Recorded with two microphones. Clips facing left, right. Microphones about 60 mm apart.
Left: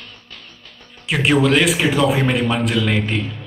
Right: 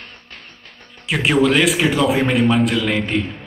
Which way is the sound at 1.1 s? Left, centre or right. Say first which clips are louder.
Even; centre.